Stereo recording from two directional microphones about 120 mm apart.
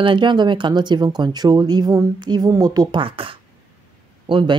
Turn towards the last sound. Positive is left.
turn(degrees=-40)  # may be behind; listen again after turning